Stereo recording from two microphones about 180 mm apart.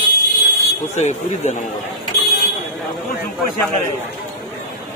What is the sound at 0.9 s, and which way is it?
Speech, 40° left (ahead or behind).